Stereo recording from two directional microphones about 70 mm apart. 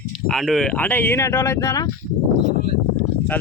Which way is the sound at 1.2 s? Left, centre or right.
Left.